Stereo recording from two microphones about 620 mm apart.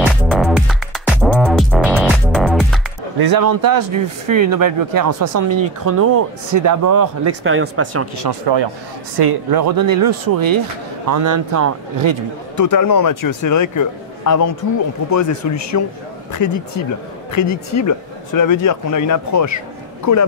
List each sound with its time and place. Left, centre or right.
0.0 s music: centre
3.2 s speech: right
12.5 s a man's voice: left